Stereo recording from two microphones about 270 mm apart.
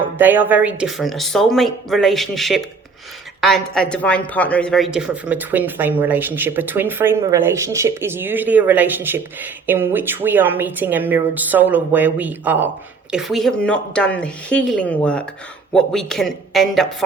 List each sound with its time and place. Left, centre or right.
0.2 s speech: centre